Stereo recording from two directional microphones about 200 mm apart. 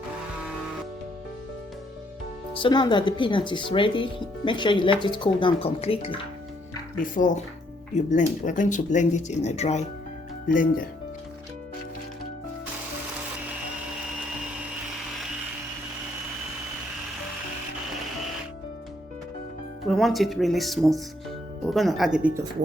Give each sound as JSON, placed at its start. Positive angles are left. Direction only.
{"t": 2.5, "sound": "speech", "side_deg": 25}
{"t": 6.9, "sound": "speech", "side_deg": 45}
{"t": 19.9, "sound": "speech", "side_deg": 0}